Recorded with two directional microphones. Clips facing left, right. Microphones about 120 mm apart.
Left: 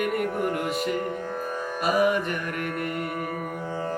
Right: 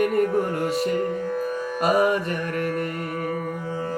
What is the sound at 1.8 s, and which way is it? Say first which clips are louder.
Music: right 2 dB; 35° right (ahead or behind).